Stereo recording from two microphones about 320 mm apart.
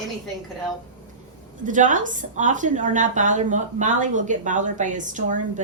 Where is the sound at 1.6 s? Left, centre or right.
Right.